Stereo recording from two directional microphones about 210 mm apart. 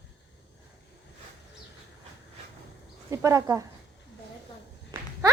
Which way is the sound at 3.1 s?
15° right (ahead or behind).